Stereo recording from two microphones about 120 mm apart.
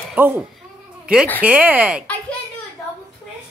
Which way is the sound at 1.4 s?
15° right (ahead or behind).